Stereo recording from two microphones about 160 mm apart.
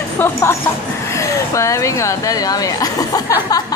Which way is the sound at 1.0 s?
20° left (ahead or behind).